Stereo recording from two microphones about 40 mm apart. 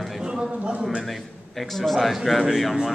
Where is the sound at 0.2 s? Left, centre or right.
Right.